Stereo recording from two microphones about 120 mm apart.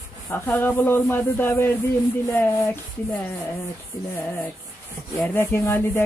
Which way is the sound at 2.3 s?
20° left (ahead or behind).